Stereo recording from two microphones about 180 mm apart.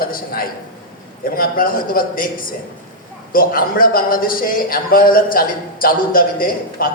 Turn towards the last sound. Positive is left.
turn(degrees=55)  # may be behind; listen again after turning